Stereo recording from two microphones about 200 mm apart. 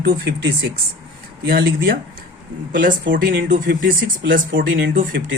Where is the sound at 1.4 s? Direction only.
50° right (ahead or behind).